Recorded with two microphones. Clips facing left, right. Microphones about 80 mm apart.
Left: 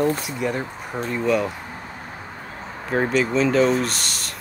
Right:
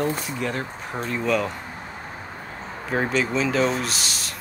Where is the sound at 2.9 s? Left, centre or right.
Centre.